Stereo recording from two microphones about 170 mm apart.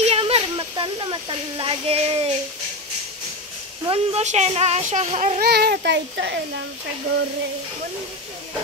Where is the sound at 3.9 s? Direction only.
40° right (ahead or behind).